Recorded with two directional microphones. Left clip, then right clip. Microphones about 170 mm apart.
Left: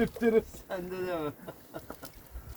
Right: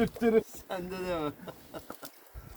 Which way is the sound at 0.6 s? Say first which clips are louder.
Even; 60° right (ahead or behind).